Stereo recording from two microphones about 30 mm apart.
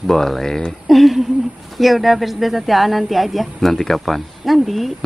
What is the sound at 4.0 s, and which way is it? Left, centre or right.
Speech, centre.